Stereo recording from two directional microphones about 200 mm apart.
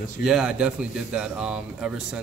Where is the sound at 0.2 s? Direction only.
Centre (ahead or behind).